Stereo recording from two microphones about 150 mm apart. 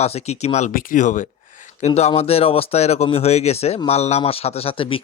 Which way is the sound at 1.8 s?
45° left (ahead or behind).